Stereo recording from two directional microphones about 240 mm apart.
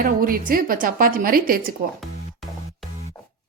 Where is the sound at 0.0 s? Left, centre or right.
Right.